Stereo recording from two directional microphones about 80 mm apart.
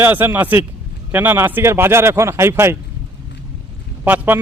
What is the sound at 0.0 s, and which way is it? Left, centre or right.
A man's voice, right.